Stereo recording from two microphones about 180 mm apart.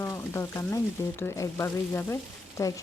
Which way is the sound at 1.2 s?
15° left (ahead or behind).